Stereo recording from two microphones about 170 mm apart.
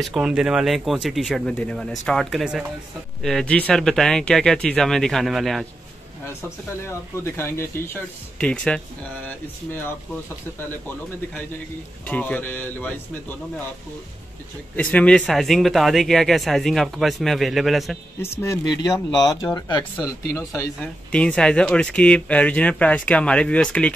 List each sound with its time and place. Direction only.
0.0 s speech: centre (ahead or behind)
6.2 s speech: 15° left (ahead or behind)
12.1 s speech: 10° left (ahead or behind)
14.8 s speech: 10° left (ahead or behind)
18.4 s speech: 15° left (ahead or behind)